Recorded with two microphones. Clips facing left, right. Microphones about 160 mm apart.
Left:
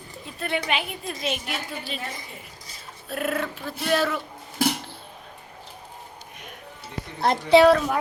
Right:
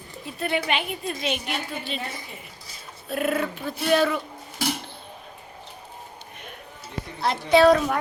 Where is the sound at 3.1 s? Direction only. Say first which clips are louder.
Right 2 dB; centre (ahead or behind).